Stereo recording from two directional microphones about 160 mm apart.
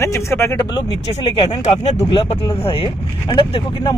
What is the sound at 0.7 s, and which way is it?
Speech, 30° left (ahead or behind).